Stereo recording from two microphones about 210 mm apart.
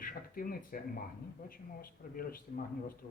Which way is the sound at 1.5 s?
45° left (ahead or behind).